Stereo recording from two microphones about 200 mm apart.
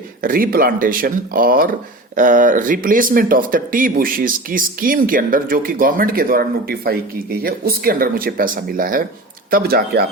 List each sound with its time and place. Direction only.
0.2 s speech: 45° right (ahead or behind)